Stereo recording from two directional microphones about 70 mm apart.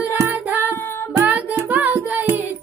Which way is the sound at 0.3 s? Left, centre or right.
Right.